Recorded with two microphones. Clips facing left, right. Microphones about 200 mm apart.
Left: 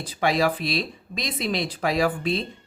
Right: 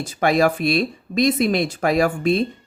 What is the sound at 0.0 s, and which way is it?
A woman's voice, 50° right (ahead or behind).